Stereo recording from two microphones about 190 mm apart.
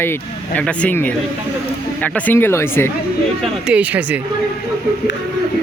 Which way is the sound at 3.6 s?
5° right (ahead or behind).